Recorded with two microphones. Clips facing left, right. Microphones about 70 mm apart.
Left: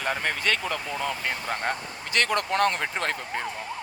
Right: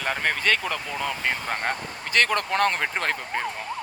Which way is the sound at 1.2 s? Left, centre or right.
Right.